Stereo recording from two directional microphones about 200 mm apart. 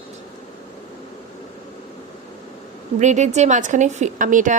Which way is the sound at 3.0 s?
35° right (ahead or behind).